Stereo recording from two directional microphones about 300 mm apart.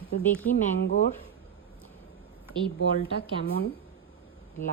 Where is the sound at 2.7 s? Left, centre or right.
Left.